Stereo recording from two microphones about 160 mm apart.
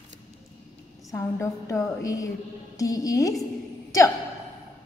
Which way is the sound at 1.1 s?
20° left (ahead or behind).